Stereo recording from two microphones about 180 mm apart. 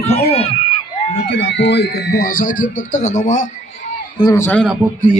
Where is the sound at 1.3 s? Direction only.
90° left; by 3.5 s 40° left (ahead or behind).